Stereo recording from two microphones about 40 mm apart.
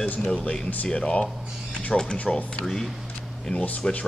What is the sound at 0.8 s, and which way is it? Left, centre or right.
Speech, left.